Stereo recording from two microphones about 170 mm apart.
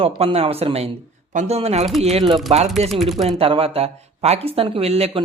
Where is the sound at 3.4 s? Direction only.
35° right (ahead or behind).